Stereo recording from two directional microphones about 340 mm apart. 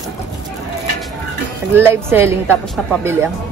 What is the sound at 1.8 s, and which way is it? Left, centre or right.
A woman's voice, centre.